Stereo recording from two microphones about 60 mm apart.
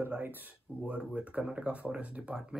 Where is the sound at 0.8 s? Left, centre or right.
Centre.